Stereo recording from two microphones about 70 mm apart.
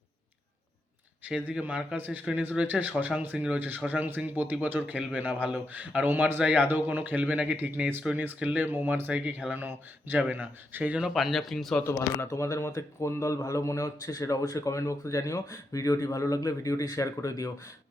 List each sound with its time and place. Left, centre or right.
1.4 s speech: right
6.4 s speech: centre
6.7 s speech: right
8.0 s speech: centre
9.0 s speech: right
11.1 s speech: centre
11.8 s a man's voice: left